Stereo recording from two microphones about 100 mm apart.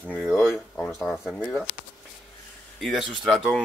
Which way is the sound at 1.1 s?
5° right (ahead or behind).